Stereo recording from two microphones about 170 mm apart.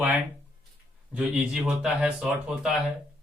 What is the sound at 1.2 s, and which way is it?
Speech, 5° right (ahead or behind).